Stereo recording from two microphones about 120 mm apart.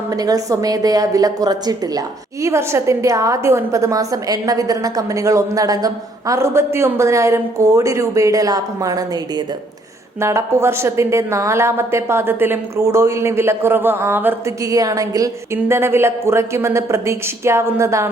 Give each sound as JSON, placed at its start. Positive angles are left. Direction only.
{"t": 0.1, "sound": "a woman's voice", "side_deg": -30}
{"t": 10.2, "sound": "a woman's voice", "side_deg": -25}
{"t": 14.6, "sound": "a woman's voice", "side_deg": -30}